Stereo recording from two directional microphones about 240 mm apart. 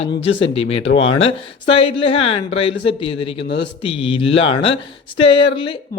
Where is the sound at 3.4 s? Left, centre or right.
Left.